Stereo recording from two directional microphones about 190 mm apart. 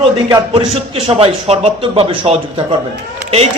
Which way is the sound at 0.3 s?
15° right (ahead or behind).